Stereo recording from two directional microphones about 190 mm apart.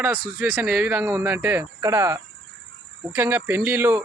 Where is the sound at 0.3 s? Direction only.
10° right (ahead or behind).